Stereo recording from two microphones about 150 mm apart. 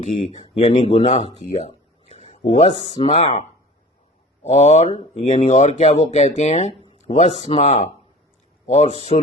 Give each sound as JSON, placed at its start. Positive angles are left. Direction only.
{"t": 0.2, "sound": "speech", "side_deg": 40}
{"t": 2.0, "sound": "a sound", "side_deg": 45}
{"t": 2.8, "sound": "speech", "side_deg": 40}
{"t": 4.4, "sound": "speech", "side_deg": 45}